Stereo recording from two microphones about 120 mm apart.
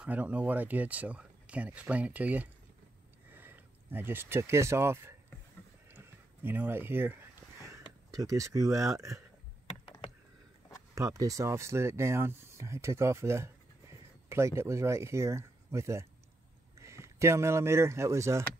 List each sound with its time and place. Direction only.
0.0 s speech: 15° right (ahead or behind)
5.9 s a sound: 20° right (ahead or behind)
8.1 s speech: 30° right (ahead or behind)
11.0 s speech: 25° right (ahead or behind)